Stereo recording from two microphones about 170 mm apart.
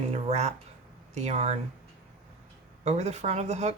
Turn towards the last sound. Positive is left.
turn(degrees=-40)  # may be behind; listen again after turning